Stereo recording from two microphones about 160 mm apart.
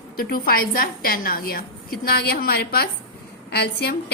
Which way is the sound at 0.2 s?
65° left (ahead or behind).